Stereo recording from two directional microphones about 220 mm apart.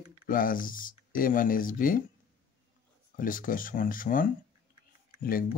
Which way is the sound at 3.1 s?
40° left (ahead or behind).